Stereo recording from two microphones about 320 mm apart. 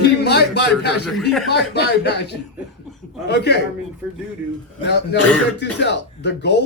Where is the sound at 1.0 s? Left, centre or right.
Centre.